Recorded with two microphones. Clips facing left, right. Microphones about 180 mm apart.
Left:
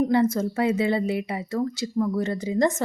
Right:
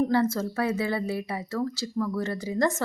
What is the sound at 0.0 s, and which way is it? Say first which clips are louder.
A woman's voice: left 3 dB; 20° left (ahead or behind).